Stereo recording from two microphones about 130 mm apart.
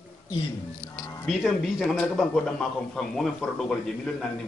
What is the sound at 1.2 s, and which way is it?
A man's voice, centre (ahead or behind).